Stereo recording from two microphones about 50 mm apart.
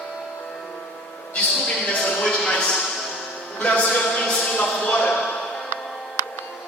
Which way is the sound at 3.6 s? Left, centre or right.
Left.